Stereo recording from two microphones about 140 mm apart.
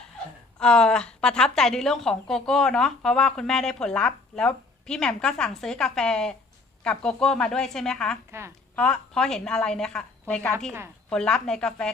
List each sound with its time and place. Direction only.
0.6 s a woman's voice: 5° left (ahead or behind)
8.3 s a woman's voice: 20° right (ahead or behind)
8.7 s a woman's voice: 5° left (ahead or behind)